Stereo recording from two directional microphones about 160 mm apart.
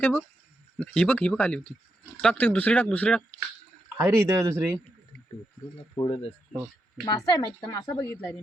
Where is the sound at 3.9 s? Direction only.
15° right (ahead or behind).